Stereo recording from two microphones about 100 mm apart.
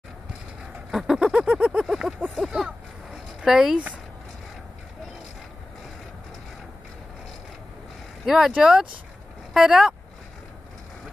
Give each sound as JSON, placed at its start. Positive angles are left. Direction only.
{"t": 0.9, "sound": "a sound", "side_deg": -5}
{"t": 3.4, "sound": "speech", "side_deg": -5}
{"t": 8.3, "sound": "speech", "side_deg": -5}